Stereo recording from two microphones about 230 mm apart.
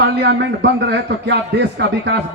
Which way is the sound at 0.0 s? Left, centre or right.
Right.